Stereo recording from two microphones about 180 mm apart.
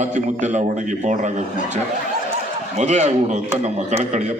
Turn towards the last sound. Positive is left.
turn(degrees=-40)  # may be behind; listen again after turning